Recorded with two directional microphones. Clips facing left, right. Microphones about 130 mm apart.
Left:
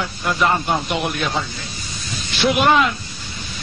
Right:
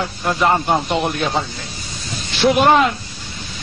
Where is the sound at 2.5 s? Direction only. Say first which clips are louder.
Right 3 dB; 40° right (ahead or behind).